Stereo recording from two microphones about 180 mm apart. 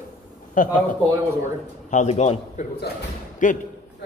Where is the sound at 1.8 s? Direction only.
40° left (ahead or behind).